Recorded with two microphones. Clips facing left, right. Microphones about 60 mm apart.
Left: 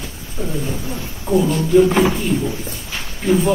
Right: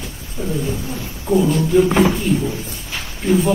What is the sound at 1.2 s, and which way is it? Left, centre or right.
A man's voice, centre.